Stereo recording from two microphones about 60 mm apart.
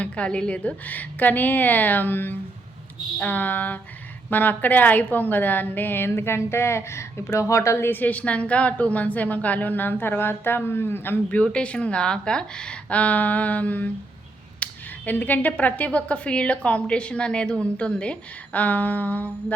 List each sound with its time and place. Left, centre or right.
0.0 s a woman's voice: centre; by 7.9 s left
7.9 s speech: left
11.5 s speech: left